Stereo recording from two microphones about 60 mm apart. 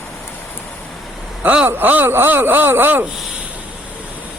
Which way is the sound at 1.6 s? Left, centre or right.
Right.